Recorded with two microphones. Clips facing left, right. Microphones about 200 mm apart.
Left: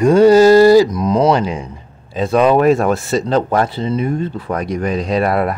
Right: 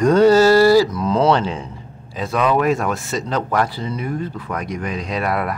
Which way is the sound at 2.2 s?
30° left (ahead or behind).